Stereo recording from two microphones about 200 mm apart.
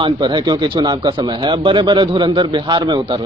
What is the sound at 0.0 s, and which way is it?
Speech, 20° right (ahead or behind).